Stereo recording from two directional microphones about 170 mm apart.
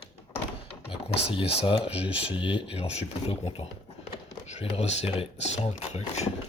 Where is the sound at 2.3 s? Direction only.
30° left (ahead or behind).